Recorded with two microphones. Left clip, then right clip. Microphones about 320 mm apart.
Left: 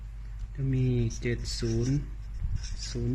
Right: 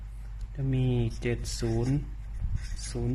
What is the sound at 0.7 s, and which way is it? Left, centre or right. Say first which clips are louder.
Speech: even; right.